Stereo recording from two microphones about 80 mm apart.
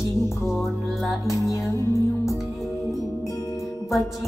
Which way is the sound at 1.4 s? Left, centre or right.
Left.